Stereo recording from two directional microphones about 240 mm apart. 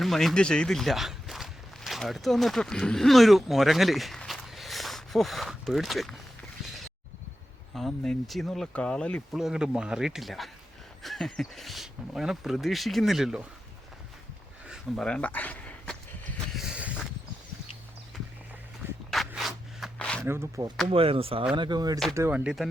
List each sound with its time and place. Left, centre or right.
0.0 s speech: centre
7.8 s speech: centre
14.7 s a sound: centre
19.1 s zipper: centre
20.2 s speech: centre